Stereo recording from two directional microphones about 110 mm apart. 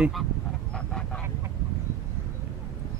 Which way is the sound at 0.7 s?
10° left (ahead or behind).